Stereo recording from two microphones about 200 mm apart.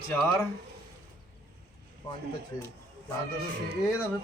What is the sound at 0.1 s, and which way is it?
Speech, 10° left (ahead or behind).